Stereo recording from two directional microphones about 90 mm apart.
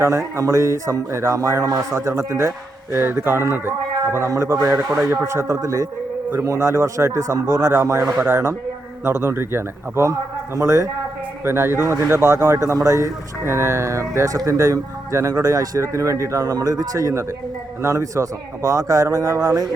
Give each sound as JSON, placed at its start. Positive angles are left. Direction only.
{"t": 0.0, "sound": "a man's voice", "side_deg": -35}